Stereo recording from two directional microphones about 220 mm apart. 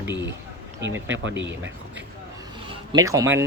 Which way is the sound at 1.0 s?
55° right (ahead or behind).